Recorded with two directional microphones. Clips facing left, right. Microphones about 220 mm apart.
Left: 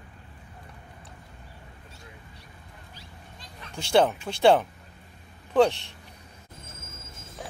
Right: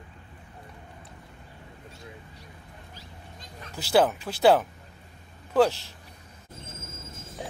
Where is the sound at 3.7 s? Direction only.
5° right (ahead or behind).